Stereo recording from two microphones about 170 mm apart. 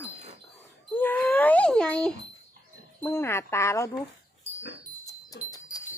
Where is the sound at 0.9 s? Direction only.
10° left (ahead or behind).